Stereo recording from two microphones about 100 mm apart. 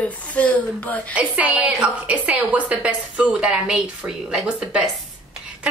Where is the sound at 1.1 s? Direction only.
15° right (ahead or behind).